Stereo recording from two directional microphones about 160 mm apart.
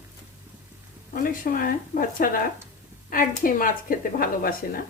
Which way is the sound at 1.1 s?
60° left (ahead or behind).